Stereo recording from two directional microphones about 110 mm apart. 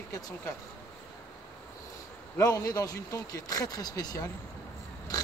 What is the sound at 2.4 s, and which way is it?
Speech, 30° left (ahead or behind).